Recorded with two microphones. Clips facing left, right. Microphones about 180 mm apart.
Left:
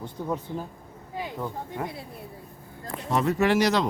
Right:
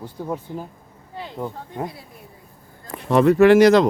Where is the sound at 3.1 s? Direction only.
65° right (ahead or behind).